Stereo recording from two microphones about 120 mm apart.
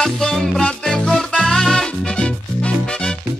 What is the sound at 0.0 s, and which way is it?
Music, 5° left (ahead or behind).